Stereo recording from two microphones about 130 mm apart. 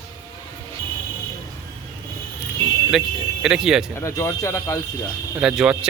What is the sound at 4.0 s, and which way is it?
Speech, 20° left (ahead or behind).